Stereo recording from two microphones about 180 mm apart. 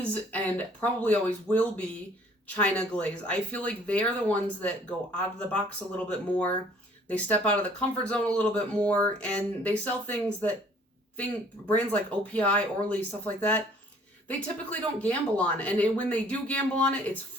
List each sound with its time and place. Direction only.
0.1 s speech: 10° left (ahead or behind)
11.7 s speech: 10° left (ahead or behind)